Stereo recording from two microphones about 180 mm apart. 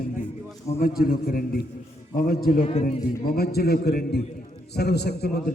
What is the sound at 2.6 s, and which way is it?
Speech, 35° left (ahead or behind).